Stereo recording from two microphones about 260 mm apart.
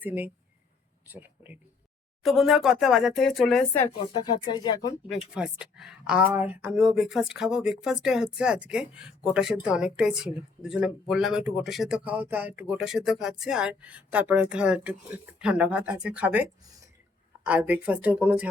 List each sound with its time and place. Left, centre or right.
0.0 s a woman's voice: centre
4.1 s speech: centre
5.3 s a woman's voice: centre